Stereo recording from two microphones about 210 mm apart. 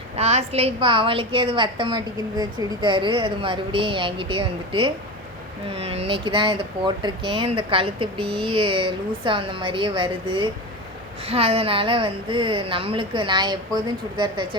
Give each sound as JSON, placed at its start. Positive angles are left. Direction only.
{"t": 0.2, "sound": "a woman's voice", "side_deg": -30}